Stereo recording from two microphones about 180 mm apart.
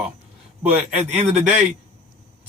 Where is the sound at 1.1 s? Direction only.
40° right (ahead or behind).